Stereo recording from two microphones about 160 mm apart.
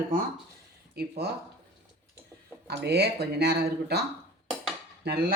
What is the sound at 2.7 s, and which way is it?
Speech, 90° right.